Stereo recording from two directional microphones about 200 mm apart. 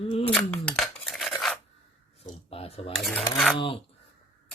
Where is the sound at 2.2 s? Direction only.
30° left (ahead or behind).